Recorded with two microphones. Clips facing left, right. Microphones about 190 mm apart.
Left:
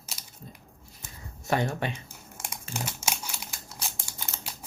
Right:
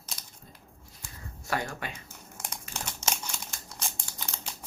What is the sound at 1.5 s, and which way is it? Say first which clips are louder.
Speech: left 6 dB; 25° left (ahead or behind).